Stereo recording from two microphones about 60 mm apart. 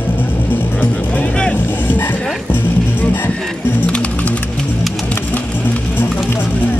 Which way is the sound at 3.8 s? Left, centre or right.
Centre.